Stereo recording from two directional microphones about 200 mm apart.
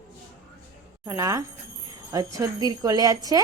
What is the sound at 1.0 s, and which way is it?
A woman's voice, 15° right (ahead or behind).